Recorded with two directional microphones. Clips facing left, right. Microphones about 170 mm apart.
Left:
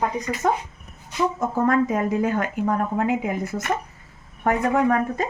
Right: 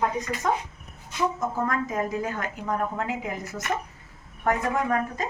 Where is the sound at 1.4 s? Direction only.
65° left (ahead or behind).